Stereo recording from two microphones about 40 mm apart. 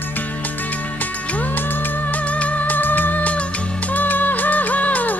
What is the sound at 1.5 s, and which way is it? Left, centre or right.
Music, left.